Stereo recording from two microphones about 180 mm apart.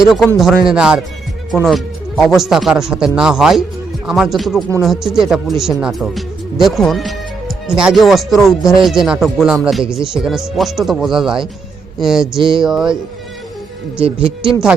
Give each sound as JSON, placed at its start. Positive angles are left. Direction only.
{"t": 0.0, "sound": "speech", "side_deg": 0}
{"t": 14.0, "sound": "speech", "side_deg": -30}